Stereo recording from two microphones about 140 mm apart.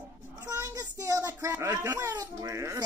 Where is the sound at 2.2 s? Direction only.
25° right (ahead or behind).